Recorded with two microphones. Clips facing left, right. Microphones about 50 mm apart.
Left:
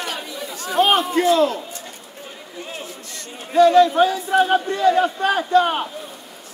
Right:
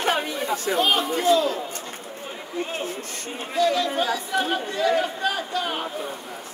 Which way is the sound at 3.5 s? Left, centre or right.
Left.